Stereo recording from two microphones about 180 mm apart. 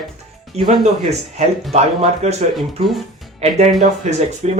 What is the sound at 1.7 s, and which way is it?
Speech, 35° right (ahead or behind).